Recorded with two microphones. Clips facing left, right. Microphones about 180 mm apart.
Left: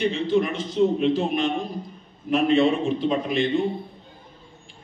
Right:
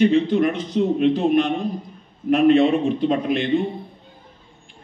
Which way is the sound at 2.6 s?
55° right (ahead or behind).